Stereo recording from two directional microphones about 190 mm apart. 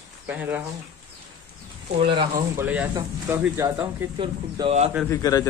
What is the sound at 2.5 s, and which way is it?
Speech, 10° right (ahead or behind).